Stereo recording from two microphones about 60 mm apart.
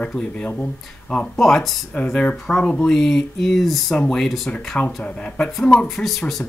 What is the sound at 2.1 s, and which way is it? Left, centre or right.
Speech, centre.